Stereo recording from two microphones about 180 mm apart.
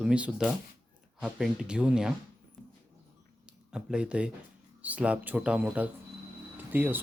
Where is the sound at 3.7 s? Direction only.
5° right (ahead or behind).